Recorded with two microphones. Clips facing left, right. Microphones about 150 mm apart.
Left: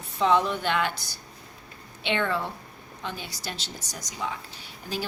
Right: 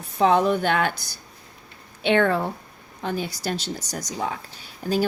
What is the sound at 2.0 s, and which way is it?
Speech, 45° right (ahead or behind).